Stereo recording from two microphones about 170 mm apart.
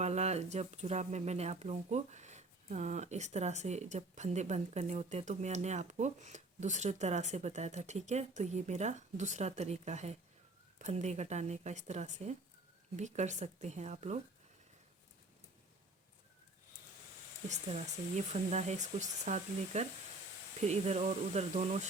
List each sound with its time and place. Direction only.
0.0 s speech: 40° right (ahead or behind)
17.5 s speech: 40° right (ahead or behind)